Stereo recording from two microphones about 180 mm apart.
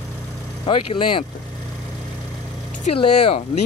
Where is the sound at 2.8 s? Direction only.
30° left (ahead or behind).